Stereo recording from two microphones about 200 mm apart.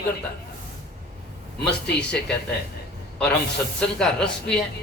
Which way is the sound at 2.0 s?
5° left (ahead or behind).